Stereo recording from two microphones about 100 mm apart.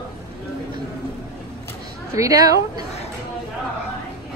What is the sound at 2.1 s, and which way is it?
Speech, 35° right (ahead or behind).